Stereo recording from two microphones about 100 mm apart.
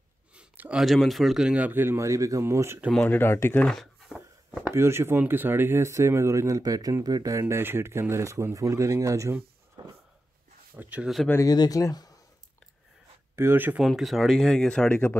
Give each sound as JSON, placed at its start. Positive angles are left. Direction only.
{"t": 0.3, "sound": "a sound", "side_deg": -10}
{"t": 0.8, "sound": "speech", "side_deg": 0}
{"t": 2.9, "sound": "speech", "side_deg": 15}
{"t": 3.6, "sound": "a sound", "side_deg": 5}
{"t": 4.6, "sound": "speech", "side_deg": -25}
{"t": 9.8, "sound": "a sound", "side_deg": -45}
{"t": 10.8, "sound": "speech", "side_deg": -15}
{"t": 11.4, "sound": "speech", "side_deg": 40}
{"t": 13.4, "sound": "speech", "side_deg": -20}
{"t": 13.8, "sound": "speech", "side_deg": 0}
{"t": 14.9, "sound": "speech", "side_deg": 20}